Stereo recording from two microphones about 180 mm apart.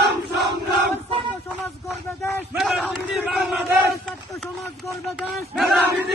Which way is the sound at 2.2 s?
Centre (ahead or behind).